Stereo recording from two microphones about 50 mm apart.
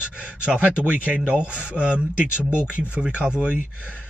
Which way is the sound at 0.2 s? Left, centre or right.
Right.